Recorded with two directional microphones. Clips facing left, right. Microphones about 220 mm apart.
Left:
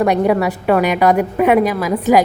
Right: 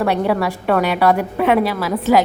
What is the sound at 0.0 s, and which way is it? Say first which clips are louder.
A woman's voice: left 3 dB; 15° left (ahead or behind).